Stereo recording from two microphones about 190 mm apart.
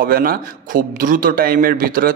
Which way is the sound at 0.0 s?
50° right (ahead or behind).